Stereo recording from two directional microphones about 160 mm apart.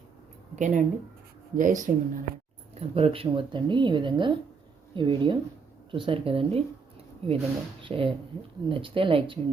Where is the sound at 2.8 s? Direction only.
40° right (ahead or behind).